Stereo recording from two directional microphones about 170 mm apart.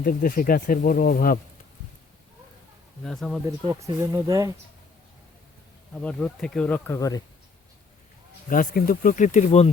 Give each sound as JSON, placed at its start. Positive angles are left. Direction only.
{"t": 0.0, "sound": "speech", "side_deg": 55}
{"t": 3.0, "sound": "speech", "side_deg": 5}
{"t": 3.7, "sound": "speech", "side_deg": -20}
{"t": 5.9, "sound": "speech", "side_deg": 5}
{"t": 8.4, "sound": "speech", "side_deg": 55}